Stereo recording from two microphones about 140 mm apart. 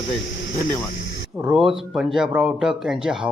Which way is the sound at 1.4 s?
5° right (ahead or behind).